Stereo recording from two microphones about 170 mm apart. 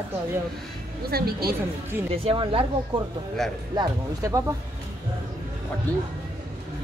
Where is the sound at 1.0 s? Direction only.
65° right (ahead or behind).